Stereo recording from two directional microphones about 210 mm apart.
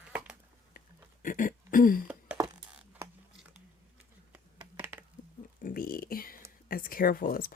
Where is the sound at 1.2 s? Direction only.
40° left (ahead or behind).